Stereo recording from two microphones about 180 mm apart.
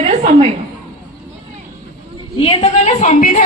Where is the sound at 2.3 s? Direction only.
35° left (ahead or behind).